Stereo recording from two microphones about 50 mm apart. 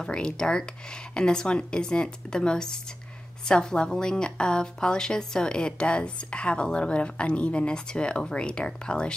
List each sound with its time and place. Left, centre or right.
0.0 s a woman's voice: centre